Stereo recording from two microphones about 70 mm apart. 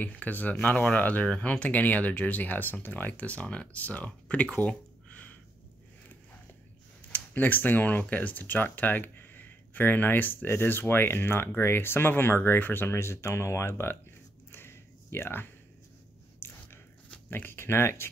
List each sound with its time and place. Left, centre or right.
0.0 s speech: left
7.1 s speech: left
14.5 s a sound: left
16.3 s biting: left
17.3 s speech: left